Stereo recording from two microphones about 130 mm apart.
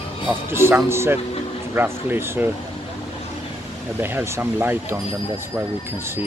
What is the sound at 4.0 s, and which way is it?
Speech, 15° right (ahead or behind).